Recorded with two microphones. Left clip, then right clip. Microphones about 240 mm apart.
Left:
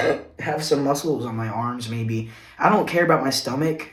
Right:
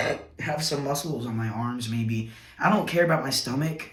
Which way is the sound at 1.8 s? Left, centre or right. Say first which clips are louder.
Left 3 dB; centre.